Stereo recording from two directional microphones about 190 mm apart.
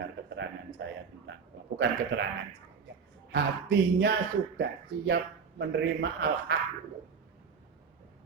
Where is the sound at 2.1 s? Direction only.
60° right (ahead or behind).